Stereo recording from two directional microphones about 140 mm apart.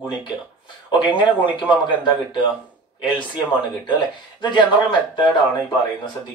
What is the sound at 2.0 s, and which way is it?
Speech, 35° left (ahead or behind).